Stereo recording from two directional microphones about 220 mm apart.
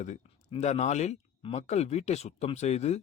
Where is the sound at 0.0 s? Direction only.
30° left (ahead or behind).